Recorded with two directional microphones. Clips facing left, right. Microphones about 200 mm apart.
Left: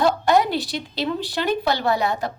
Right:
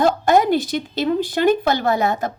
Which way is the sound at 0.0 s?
50° right (ahead or behind).